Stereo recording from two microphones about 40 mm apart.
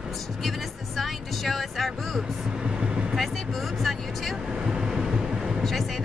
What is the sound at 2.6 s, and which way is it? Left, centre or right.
Vehicle, right.